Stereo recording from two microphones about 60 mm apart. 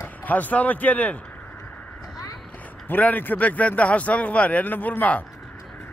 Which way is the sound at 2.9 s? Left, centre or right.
Left.